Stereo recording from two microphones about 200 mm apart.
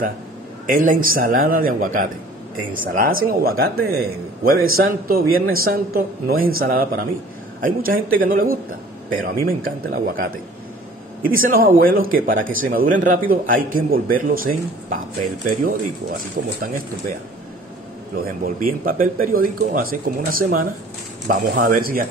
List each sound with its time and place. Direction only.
0.7 s speech: 45° right (ahead or behind)
11.2 s speech: 45° right (ahead or behind)
18.4 s speech: 45° right (ahead or behind)